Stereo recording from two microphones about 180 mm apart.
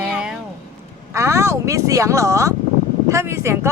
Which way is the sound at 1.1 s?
15° right (ahead or behind).